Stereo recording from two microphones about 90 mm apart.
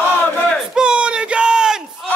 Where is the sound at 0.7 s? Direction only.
10° right (ahead or behind).